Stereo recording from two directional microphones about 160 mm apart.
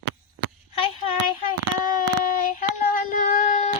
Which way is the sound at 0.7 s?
35° left (ahead or behind).